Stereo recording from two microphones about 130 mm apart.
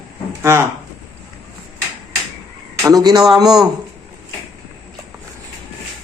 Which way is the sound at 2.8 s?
30° right (ahead or behind).